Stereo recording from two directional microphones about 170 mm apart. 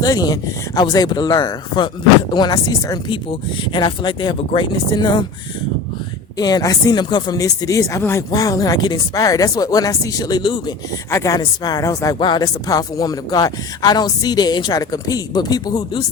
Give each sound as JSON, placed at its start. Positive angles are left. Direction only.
{"t": 0.0, "sound": "speech", "side_deg": 20}
{"t": 6.3, "sound": "speech", "side_deg": 25}